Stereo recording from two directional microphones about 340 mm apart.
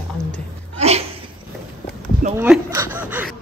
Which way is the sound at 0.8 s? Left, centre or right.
Centre.